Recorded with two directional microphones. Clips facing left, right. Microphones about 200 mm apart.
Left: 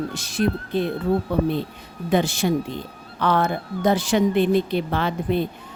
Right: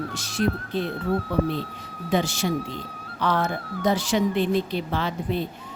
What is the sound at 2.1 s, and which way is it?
Speech, 55° left (ahead or behind).